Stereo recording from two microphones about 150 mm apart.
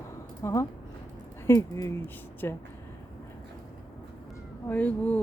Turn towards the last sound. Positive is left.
turn(degrees=10)  # may be behind; listen again after turning